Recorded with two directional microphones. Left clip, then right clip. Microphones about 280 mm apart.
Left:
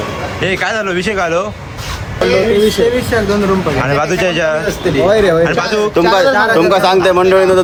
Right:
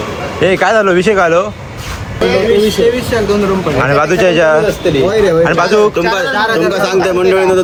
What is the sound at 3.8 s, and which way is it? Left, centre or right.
Speech, centre.